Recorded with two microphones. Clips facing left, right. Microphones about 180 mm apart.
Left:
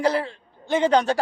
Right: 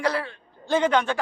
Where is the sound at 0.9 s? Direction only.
35° left (ahead or behind).